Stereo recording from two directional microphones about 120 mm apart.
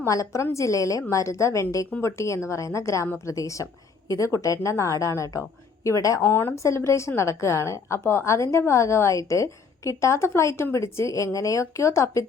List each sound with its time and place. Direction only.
0.0 s a woman's voice: 25° left (ahead or behind)